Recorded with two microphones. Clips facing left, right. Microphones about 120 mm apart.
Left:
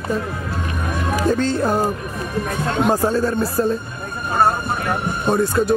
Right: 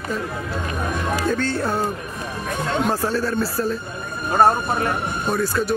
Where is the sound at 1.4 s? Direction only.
15° left (ahead or behind).